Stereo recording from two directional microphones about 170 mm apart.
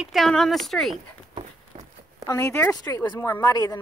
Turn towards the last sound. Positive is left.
turn(degrees=25)  # may be behind; listen again after turning